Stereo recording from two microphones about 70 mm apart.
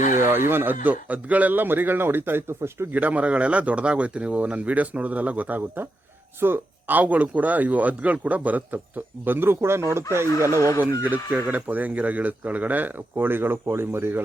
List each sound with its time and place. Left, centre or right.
0.2 s a man's voice: right
2.9 s speech: right
11.0 s speech: right